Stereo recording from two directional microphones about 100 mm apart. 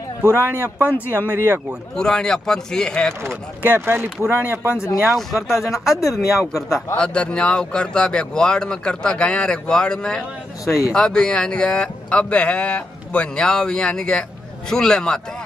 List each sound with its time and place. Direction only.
0.8 s speech: 20° left (ahead or behind)
1.1 s speech: 20° right (ahead or behind)
2.0 s speech: 5° left (ahead or behind)
3.2 s speech: 25° right (ahead or behind)
5.0 s speech: centre (ahead or behind)
5.7 s speech: 35° left (ahead or behind)
7.0 s speech: 10° left (ahead or behind)